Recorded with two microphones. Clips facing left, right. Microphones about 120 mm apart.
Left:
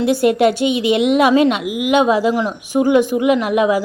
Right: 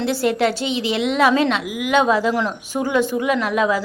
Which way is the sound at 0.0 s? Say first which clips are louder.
Left 5 dB; 15° left (ahead or behind).